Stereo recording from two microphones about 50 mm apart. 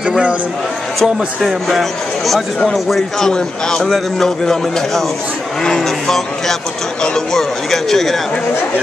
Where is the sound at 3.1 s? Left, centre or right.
Centre.